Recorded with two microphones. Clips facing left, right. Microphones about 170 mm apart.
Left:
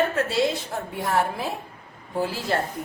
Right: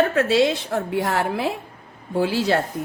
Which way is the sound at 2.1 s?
90° right.